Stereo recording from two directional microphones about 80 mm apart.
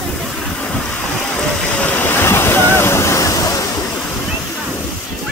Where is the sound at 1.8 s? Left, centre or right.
Left.